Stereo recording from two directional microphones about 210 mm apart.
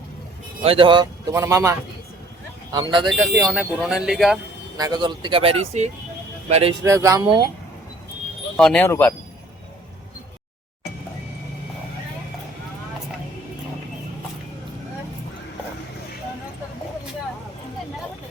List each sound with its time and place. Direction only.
0.6 s speech: 25° right (ahead or behind)
2.7 s speech: 20° right (ahead or behind)
3.2 s speech: 5° right (ahead or behind)
4.8 s speech: 20° right (ahead or behind)
6.8 s speech: 15° right (ahead or behind)
8.5 s speech: 5° left (ahead or behind)